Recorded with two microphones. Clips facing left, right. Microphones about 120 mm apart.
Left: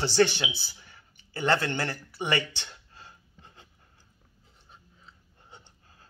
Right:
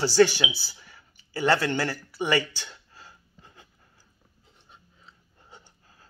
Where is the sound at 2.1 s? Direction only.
25° left (ahead or behind).